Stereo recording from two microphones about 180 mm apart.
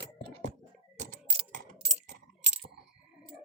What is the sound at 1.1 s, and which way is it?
Typing, 45° right (ahead or behind).